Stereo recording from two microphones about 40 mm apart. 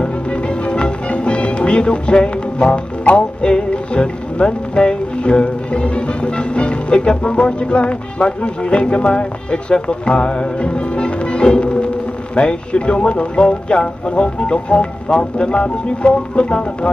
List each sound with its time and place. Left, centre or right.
0.0 s speech: left